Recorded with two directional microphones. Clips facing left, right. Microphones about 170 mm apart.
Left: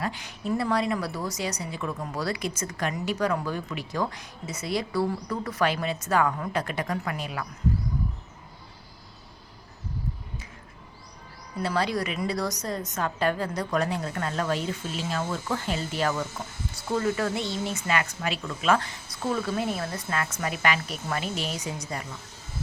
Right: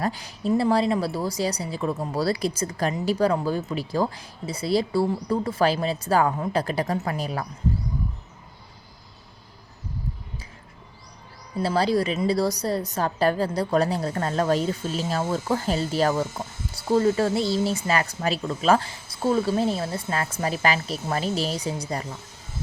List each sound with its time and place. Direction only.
0.0 s a woman's voice: 35° right (ahead or behind)
11.5 s a woman's voice: 30° right (ahead or behind)